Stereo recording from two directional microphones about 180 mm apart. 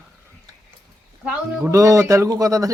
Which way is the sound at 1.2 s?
5° right (ahead or behind).